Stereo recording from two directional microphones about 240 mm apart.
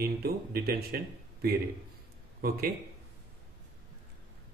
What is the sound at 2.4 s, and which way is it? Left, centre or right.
Speech, right.